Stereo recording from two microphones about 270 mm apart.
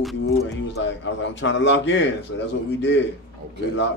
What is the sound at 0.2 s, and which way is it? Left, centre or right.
A man's voice, left.